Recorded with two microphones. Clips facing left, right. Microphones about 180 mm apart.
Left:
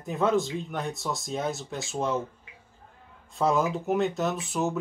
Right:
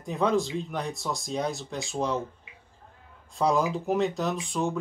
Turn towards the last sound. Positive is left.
turn(degrees=5)  # may be behind; listen again after turning